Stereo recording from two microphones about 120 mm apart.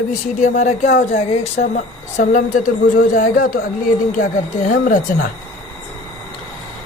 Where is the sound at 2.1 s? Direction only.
90° left.